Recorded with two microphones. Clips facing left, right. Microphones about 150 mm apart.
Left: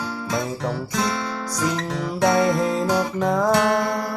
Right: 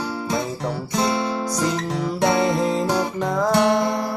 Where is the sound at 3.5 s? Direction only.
20° right (ahead or behind).